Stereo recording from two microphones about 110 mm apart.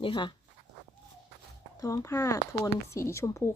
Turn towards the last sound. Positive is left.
turn(degrees=25)  # may be behind; listen again after turning